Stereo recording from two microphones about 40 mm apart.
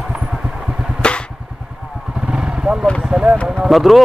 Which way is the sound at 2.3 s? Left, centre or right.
Right.